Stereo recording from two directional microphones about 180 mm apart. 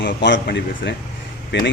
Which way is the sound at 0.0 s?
75° left (ahead or behind).